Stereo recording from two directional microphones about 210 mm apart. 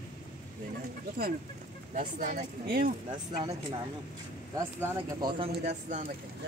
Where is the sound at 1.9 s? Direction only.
35° right (ahead or behind).